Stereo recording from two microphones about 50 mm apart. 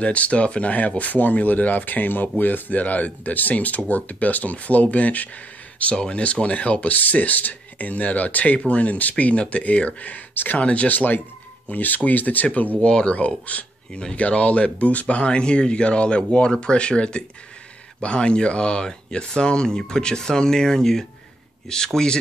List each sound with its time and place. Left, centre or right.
0.0 s speech: left
10.6 s speech: left
12.8 s speech: centre